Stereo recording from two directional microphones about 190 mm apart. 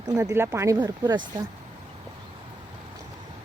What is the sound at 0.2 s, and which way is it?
Speech, 15° right (ahead or behind).